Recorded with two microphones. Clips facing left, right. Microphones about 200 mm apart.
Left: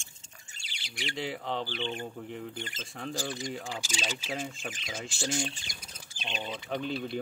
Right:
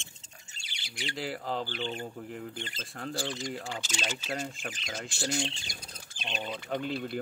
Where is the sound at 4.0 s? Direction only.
10° left (ahead or behind).